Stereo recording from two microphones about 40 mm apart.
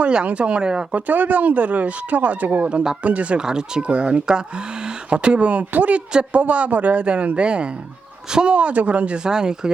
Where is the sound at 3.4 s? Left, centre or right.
Centre.